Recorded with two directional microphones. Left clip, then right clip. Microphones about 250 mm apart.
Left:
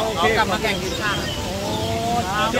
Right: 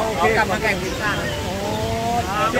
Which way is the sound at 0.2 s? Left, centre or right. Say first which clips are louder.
Right 1 dB; centre.